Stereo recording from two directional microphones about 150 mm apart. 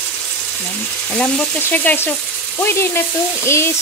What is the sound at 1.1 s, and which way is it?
Frying, 10° left (ahead or behind).